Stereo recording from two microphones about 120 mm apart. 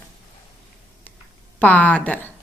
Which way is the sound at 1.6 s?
10° left (ahead or behind).